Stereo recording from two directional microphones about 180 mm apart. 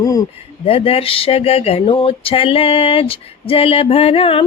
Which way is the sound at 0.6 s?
30° left (ahead or behind).